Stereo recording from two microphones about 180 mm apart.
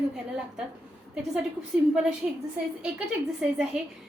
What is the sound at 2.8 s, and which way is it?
Speech, 5° right (ahead or behind).